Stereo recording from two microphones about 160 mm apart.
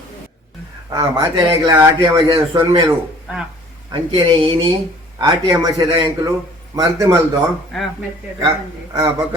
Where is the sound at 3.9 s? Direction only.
30° right (ahead or behind).